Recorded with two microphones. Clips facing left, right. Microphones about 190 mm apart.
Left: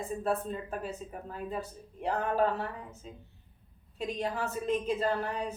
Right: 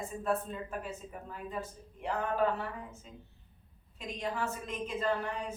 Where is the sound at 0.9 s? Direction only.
35° left (ahead or behind).